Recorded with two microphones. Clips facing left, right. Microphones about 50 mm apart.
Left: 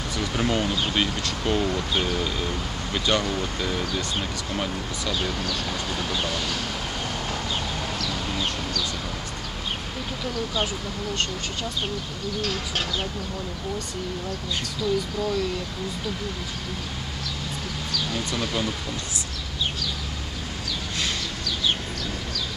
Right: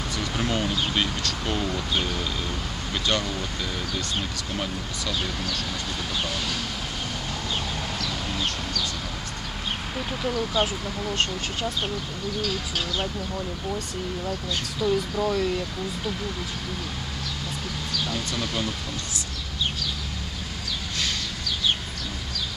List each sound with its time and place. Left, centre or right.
0.2 s speech: centre
8.1 s a sound: centre
10.2 s speech: centre
12.4 s speech: left
14.8 s speech: centre
18.1 s speech: centre